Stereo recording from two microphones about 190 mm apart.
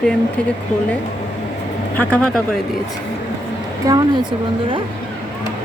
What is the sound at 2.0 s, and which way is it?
Speech, 5° left (ahead or behind).